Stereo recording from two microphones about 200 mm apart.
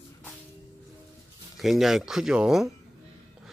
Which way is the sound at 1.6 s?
Centre (ahead or behind).